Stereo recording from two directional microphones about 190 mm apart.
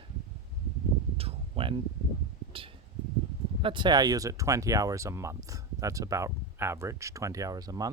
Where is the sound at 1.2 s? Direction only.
30° right (ahead or behind).